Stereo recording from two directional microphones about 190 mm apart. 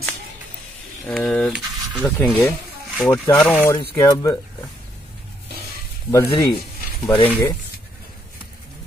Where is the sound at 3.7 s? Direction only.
20° left (ahead or behind).